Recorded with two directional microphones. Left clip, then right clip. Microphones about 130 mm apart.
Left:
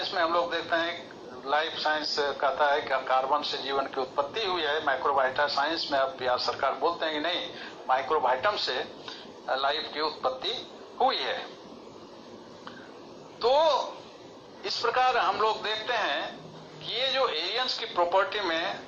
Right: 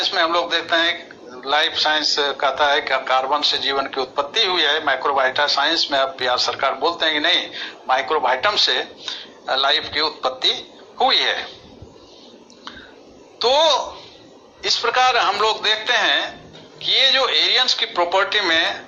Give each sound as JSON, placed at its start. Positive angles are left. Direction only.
{"t": 0.0, "sound": "a man's voice", "side_deg": -30}
{"t": 13.4, "sound": "a man's voice", "side_deg": -30}